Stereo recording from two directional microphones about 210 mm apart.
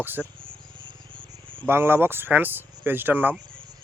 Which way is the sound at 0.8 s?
25° right (ahead or behind).